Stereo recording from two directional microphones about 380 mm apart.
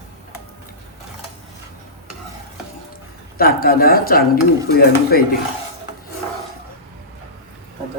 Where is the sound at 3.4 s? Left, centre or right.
Left.